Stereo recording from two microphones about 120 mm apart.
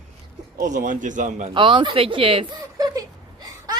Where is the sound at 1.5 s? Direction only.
45° right (ahead or behind).